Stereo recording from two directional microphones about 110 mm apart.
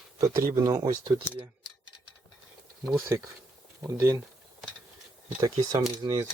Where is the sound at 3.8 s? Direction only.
30° right (ahead or behind).